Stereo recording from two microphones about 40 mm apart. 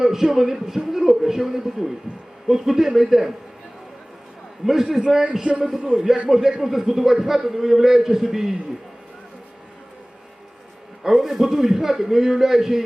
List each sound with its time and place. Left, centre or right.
0.0 s a man's voice: centre
4.6 s a man's voice: centre
5.4 s a man's voice: right
6.2 s a man's voice: centre
11.1 s a man's voice: centre